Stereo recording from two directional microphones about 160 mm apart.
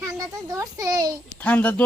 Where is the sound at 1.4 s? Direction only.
10° left (ahead or behind).